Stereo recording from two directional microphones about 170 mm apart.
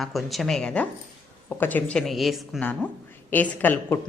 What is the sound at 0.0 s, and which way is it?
A woman's voice, centre (ahead or behind).